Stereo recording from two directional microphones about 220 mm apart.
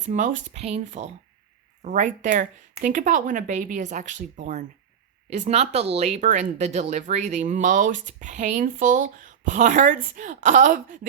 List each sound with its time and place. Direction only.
0.0 s speech: 35° right (ahead or behind)